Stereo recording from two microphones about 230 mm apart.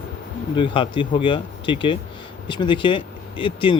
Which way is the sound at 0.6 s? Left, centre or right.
Left.